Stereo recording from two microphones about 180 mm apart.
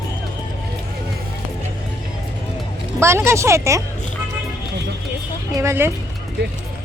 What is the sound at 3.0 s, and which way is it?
Speech, 15° right (ahead or behind).